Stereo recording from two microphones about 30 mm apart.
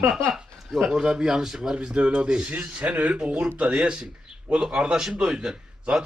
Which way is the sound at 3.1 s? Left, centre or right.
Right.